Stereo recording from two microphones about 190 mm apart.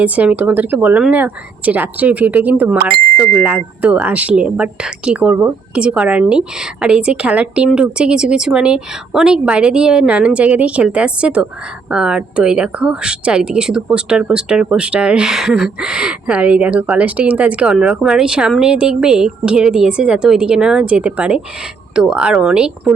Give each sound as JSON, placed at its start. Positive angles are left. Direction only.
{"t": 0.0, "sound": "speech", "side_deg": -5}